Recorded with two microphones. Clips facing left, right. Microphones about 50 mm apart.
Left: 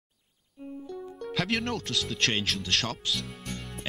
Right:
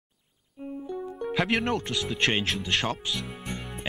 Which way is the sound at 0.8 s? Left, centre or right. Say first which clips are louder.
Right 6 dB; centre.